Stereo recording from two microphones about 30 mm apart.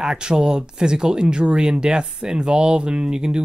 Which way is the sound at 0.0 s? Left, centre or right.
Right.